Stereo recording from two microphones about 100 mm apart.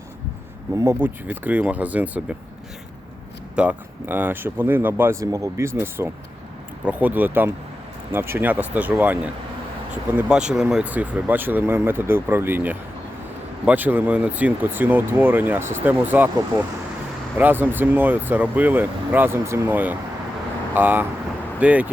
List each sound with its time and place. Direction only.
0.7 s speech: 30° right (ahead or behind)
3.5 s speech: 10° right (ahead or behind)
5.2 s speech: 35° right (ahead or behind); by 21.8 s 15° right (ahead or behind)